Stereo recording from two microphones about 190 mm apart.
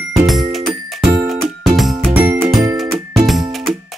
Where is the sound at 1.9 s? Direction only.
15° right (ahead or behind).